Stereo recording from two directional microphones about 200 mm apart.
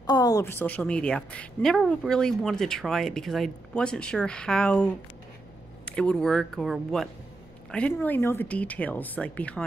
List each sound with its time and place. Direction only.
0.0 s a woman's voice: 20° left (ahead or behind)